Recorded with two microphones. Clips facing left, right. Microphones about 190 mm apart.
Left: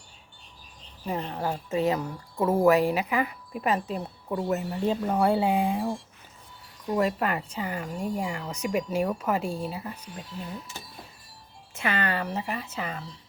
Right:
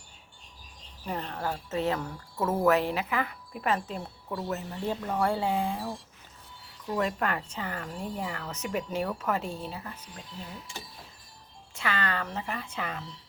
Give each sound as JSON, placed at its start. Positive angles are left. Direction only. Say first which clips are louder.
{"t": 1.0, "sound": "a woman's voice", "louder": "left 3 dB", "side_deg": 15}
{"t": 7.0, "sound": "speech", "louder": "left 3 dB", "side_deg": 5}
{"t": 11.7, "sound": "speech", "louder": "left 3 dB", "side_deg": 20}